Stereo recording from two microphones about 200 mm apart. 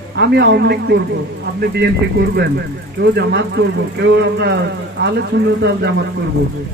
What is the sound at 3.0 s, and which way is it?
Speech, 60° right (ahead or behind).